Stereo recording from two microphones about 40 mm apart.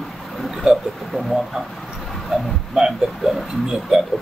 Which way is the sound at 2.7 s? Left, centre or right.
Centre.